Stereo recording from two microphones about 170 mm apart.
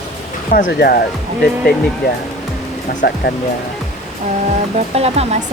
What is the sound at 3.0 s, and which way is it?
Speech, 65° left (ahead or behind).